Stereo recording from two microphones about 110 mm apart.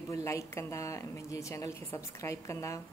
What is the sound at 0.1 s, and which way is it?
Speech, 30° left (ahead or behind).